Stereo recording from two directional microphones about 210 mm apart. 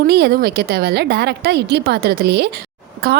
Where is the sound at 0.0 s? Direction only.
50° right (ahead or behind).